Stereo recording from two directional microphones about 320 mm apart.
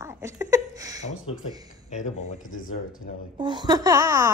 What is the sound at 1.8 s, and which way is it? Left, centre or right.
Speech, left.